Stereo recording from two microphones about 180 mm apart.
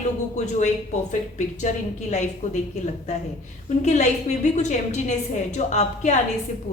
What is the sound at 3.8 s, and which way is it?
A woman's voice, 40° left (ahead or behind).